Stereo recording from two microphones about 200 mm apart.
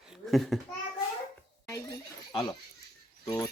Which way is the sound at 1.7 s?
15° left (ahead or behind).